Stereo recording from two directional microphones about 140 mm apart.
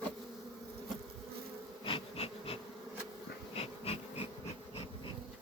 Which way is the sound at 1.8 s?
40° left (ahead or behind).